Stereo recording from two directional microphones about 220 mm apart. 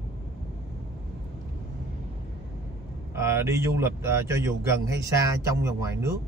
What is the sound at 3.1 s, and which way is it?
Speech, 10° right (ahead or behind).